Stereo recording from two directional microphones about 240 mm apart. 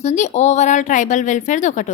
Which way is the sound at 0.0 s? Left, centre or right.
Left.